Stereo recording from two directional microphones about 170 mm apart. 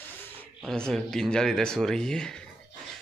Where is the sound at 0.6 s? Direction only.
5° left (ahead or behind).